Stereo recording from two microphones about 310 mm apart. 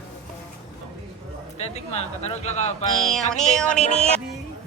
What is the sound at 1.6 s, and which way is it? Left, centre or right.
Speech, centre.